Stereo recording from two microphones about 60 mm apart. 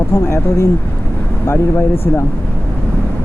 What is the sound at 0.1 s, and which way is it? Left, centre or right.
Speech, left.